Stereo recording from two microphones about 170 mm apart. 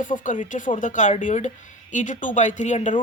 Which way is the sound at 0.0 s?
50° left (ahead or behind).